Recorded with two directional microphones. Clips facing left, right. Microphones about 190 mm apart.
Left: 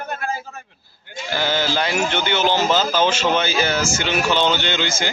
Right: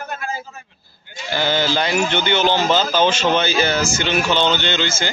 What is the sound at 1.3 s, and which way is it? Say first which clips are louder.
Speech: right 2 dB; 5° left (ahead or behind).